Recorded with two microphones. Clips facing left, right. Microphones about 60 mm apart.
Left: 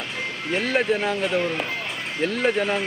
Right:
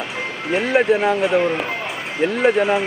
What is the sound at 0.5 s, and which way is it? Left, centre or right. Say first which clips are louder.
Speech: right 6 dB; centre.